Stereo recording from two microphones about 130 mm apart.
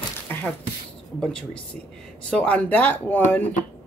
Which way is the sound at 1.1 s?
5° left (ahead or behind).